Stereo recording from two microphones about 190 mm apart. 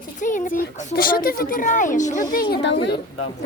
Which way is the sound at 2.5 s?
70° left (ahead or behind).